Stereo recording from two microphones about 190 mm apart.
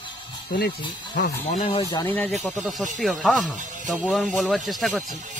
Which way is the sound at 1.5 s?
35° left (ahead or behind).